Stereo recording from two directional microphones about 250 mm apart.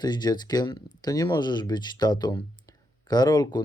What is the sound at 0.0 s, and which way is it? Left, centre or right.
Speech, centre.